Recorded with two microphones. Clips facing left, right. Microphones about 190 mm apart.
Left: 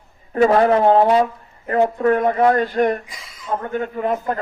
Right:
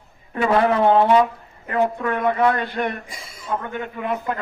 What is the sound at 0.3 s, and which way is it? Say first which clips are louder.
A man's voice: left 4 dB; 40° left (ahead or behind).